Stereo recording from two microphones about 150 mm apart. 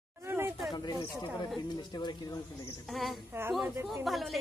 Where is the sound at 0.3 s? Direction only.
15° right (ahead or behind).